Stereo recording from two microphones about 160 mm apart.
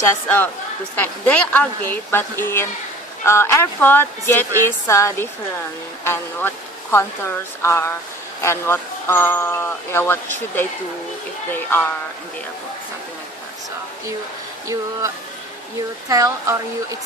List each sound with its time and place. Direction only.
0.0 s speech: 15° left (ahead or behind)
6.9 s speech: 15° left (ahead or behind)
16.0 s a woman's voice: 20° right (ahead or behind)